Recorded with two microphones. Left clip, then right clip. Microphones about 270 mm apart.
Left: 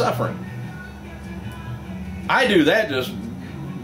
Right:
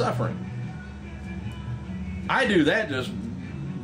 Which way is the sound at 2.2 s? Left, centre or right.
Centre.